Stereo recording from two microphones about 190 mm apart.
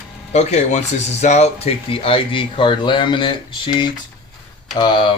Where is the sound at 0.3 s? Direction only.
35° left (ahead or behind).